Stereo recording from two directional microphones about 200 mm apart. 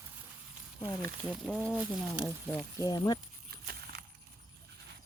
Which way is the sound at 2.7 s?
15° left (ahead or behind).